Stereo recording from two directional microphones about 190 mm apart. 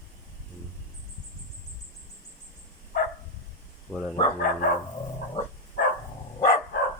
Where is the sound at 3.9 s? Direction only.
Centre (ahead or behind).